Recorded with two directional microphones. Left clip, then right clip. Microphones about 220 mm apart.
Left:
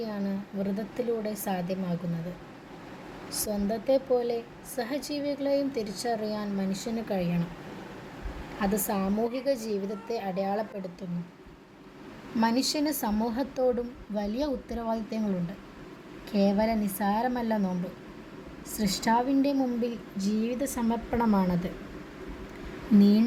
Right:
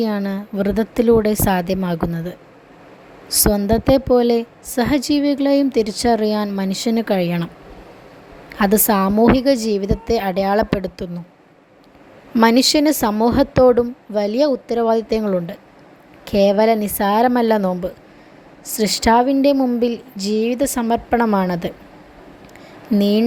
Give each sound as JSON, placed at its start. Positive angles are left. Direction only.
{"t": 0.0, "sound": "a woman's voice", "side_deg": -45}
{"t": 3.3, "sound": "a woman's voice", "side_deg": -45}
{"t": 8.5, "sound": "a woman's voice", "side_deg": -45}
{"t": 12.4, "sound": "a woman's voice", "side_deg": -45}
{"t": 23.0, "sound": "a woman's voice", "side_deg": -45}